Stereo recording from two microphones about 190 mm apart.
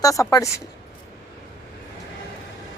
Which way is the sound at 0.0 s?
20° left (ahead or behind).